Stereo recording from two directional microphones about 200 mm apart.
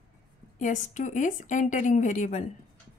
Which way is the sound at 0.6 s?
40° left (ahead or behind).